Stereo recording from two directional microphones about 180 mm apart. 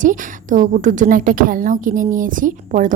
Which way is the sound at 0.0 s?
45° right (ahead or behind).